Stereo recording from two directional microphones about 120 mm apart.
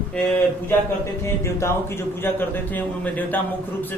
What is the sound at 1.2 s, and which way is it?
A man's voice, 25° left (ahead or behind).